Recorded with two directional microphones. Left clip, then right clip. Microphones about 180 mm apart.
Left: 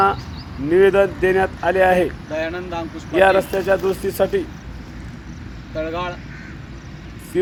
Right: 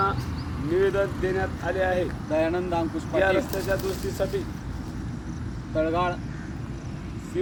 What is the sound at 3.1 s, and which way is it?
Speech, 25° left (ahead or behind).